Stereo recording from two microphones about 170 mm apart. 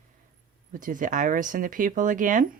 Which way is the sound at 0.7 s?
55° right (ahead or behind).